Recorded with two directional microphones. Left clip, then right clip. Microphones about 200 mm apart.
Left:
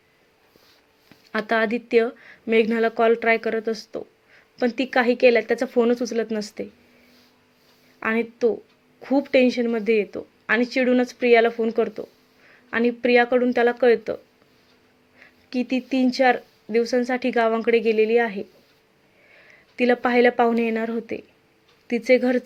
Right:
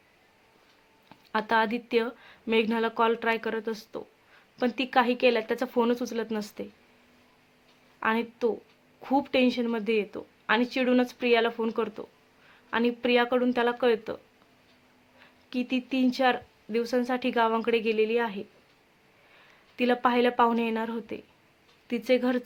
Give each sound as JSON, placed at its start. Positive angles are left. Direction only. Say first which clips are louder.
{"t": 1.3, "sound": "speech", "louder": "left 3 dB", "side_deg": 10}
{"t": 7.9, "sound": "speech", "louder": "left 4 dB", "side_deg": 5}
{"t": 15.2, "sound": "a sound", "louder": "left 6 dB", "side_deg": 10}
{"t": 16.1, "sound": "speech", "louder": "left 8 dB", "side_deg": 5}
{"t": 19.7, "sound": "speech", "louder": "left 5 dB", "side_deg": 5}